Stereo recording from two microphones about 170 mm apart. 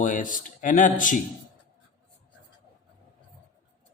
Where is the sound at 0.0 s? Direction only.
50° left (ahead or behind).